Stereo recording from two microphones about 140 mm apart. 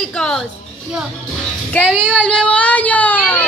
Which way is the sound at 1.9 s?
10° right (ahead or behind).